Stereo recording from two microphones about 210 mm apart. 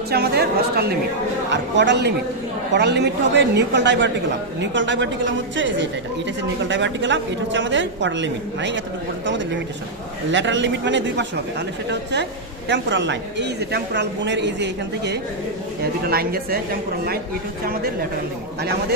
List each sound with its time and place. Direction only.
0.1 s a woman's voice: 50° right (ahead or behind)
18.6 s a woman's voice: 50° right (ahead or behind)